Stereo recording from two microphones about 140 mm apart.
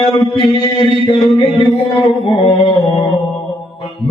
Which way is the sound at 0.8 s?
40° left (ahead or behind).